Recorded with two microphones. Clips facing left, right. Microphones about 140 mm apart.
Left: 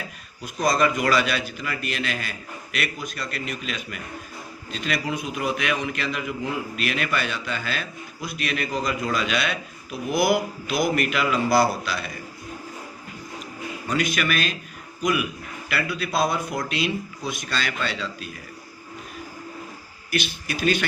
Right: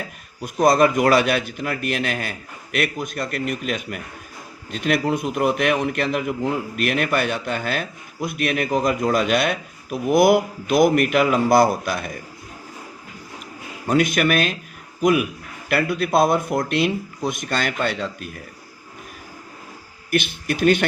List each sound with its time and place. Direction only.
0.4 s a man's voice: 55° right (ahead or behind)
13.8 s a man's voice: 55° right (ahead or behind)
20.1 s speech: 55° right (ahead or behind)